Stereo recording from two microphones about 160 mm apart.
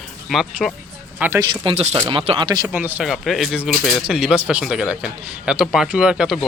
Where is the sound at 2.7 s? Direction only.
10° right (ahead or behind).